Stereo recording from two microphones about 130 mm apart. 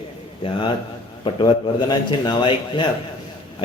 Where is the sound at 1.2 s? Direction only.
40° left (ahead or behind).